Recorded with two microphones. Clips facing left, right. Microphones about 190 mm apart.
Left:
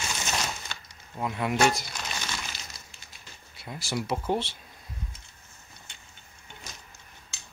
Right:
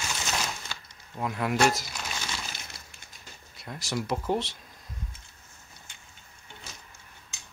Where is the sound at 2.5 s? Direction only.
55° right (ahead or behind).